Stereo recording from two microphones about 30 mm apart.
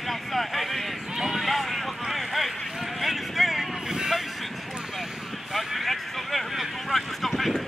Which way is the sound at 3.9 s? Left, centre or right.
Centre.